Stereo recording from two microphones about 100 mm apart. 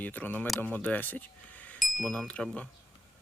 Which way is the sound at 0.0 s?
15° left (ahead or behind).